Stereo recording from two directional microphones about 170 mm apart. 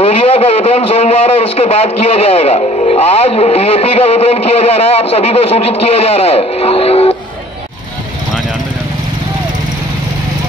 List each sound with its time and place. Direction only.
0.0 s speech: 35° left (ahead or behind)